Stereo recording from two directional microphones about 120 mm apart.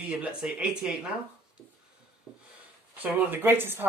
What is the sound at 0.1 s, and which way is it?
Speech, 5° right (ahead or behind).